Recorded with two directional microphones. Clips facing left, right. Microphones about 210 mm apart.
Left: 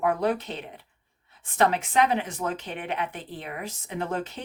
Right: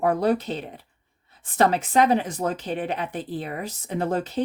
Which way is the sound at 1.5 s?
35° right (ahead or behind).